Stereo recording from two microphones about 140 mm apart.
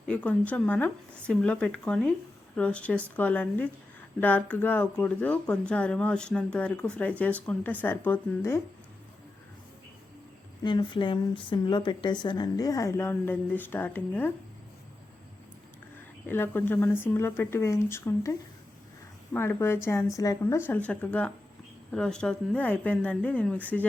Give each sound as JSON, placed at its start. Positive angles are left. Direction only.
{"t": 0.1, "sound": "speech", "side_deg": 10}
{"t": 10.6, "sound": "a woman's voice", "side_deg": 35}
{"t": 16.2, "sound": "speech", "side_deg": 15}